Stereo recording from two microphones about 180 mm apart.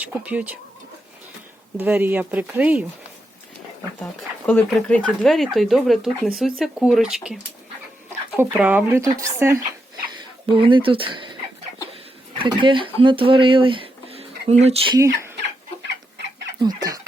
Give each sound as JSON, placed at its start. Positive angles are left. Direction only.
{"t": 0.0, "sound": "speech", "side_deg": -10}
{"t": 1.8, "sound": "speech", "side_deg": -10}
{"t": 4.0, "sound": "speech", "side_deg": 5}
{"t": 8.4, "sound": "speech", "side_deg": -10}
{"t": 10.4, "sound": "speech", "side_deg": -25}
{"t": 12.4, "sound": "speech", "side_deg": -25}
{"t": 14.9, "sound": "speech", "side_deg": -15}
{"t": 16.6, "sound": "chicken", "side_deg": -20}